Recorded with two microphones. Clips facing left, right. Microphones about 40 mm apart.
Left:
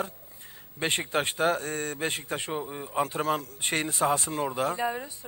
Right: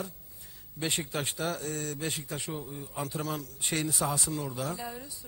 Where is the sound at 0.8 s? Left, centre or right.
Left.